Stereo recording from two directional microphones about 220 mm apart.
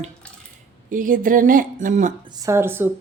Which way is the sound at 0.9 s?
40° right (ahead or behind).